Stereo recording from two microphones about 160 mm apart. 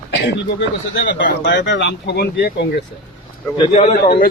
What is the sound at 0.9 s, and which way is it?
Speech, 90° left.